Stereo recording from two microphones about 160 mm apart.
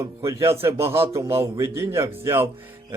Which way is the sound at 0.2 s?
20° right (ahead or behind).